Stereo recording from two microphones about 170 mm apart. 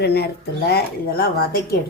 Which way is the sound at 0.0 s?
70° left (ahead or behind).